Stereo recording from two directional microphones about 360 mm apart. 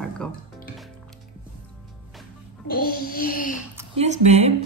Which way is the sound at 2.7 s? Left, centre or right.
Left.